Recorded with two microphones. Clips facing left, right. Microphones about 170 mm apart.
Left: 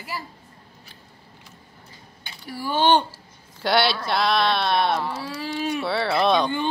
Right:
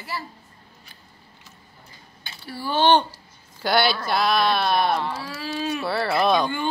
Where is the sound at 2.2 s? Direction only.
15° left (ahead or behind).